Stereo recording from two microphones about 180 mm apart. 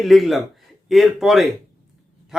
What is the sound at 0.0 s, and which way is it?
Speech, centre (ahead or behind).